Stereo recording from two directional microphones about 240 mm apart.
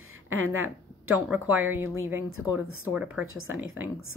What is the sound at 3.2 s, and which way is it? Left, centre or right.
Speech, right.